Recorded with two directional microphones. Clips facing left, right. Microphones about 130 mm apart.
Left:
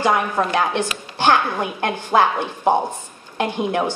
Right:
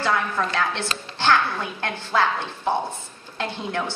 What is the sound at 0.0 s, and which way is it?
A woman's voice, 15° left (ahead or behind).